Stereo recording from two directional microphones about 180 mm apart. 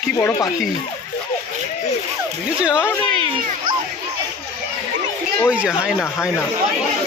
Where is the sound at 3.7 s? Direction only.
50° right (ahead or behind).